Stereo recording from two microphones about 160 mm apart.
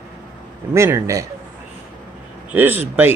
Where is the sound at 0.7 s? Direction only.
20° right (ahead or behind).